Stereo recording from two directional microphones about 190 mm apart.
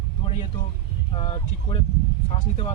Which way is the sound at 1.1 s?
30° left (ahead or behind).